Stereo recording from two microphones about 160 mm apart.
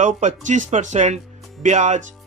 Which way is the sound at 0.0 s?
50° right (ahead or behind).